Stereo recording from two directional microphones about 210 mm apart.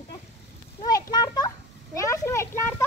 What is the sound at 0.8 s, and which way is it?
A child's voice, 20° left (ahead or behind).